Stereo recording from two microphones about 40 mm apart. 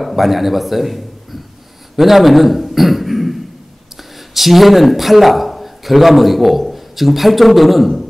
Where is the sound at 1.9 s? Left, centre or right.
Centre.